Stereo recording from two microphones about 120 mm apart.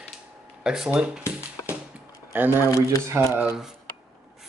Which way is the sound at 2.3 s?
15° right (ahead or behind).